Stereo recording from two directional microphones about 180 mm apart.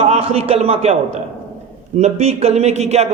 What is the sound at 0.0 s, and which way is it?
Speech, 35° right (ahead or behind).